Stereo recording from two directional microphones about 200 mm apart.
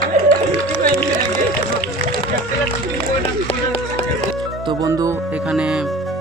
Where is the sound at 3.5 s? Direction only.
30° left (ahead or behind).